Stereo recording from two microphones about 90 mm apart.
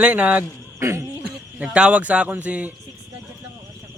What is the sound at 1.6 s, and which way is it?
Speech, 15° right (ahead or behind).